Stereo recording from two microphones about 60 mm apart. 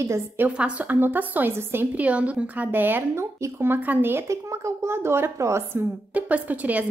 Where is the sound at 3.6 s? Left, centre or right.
Right.